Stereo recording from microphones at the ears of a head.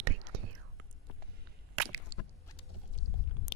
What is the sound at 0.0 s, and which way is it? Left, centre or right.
Whispering, right.